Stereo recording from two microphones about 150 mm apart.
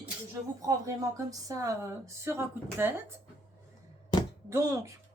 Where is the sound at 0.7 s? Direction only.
25° right (ahead or behind).